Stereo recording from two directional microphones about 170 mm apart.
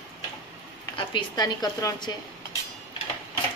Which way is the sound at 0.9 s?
25° left (ahead or behind).